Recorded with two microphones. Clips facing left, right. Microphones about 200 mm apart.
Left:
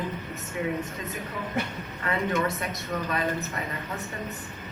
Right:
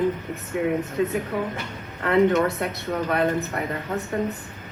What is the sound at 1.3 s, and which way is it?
Speech, 65° right (ahead or behind).